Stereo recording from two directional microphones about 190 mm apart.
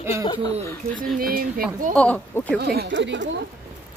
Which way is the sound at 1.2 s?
50° right (ahead or behind).